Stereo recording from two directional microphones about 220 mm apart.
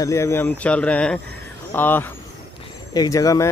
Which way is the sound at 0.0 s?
10° left (ahead or behind).